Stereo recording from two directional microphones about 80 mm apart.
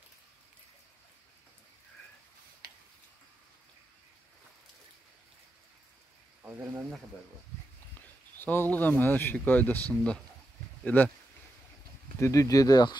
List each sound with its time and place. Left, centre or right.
6.5 s speech: right
8.4 s speech: left
12.2 s speech: left